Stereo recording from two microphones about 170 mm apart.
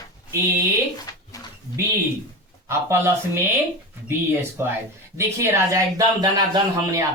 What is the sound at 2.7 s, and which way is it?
Speech, 15° right (ahead or behind).